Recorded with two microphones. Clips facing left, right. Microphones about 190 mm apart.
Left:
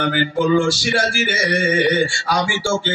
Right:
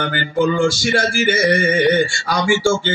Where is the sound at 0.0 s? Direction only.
45° right (ahead or behind).